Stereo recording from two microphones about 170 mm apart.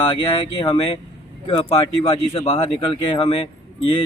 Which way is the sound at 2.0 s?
35° left (ahead or behind).